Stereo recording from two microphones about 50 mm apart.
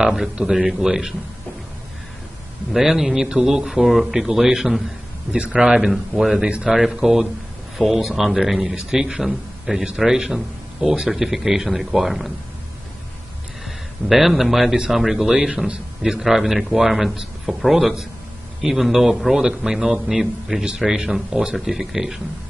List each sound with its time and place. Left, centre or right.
0.0 s a man's voice: centre
2.7 s a man's voice: centre
5.9 s a man's voice: centre
6.4 s a man's voice: centre
13.7 s a man's voice: centre
15.3 s a man's voice: centre